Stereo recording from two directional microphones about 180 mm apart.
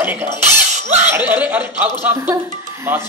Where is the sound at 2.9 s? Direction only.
10° right (ahead or behind).